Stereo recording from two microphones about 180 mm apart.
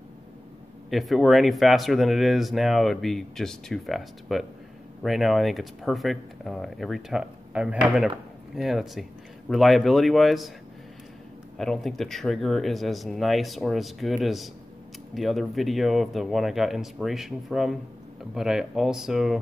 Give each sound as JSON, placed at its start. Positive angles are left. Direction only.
{"t": 0.8, "sound": "speech", "side_deg": 0}
{"t": 11.5, "sound": "speech", "side_deg": 0}